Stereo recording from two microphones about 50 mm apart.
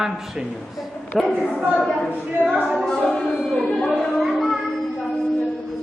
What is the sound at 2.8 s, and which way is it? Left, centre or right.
Speech, centre.